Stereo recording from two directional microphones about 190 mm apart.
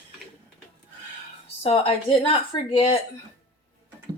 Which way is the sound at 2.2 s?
25° left (ahead or behind).